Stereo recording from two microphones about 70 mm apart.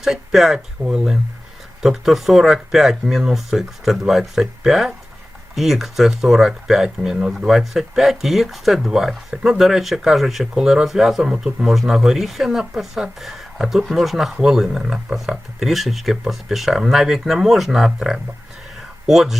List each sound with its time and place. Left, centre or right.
0.0 s speech: centre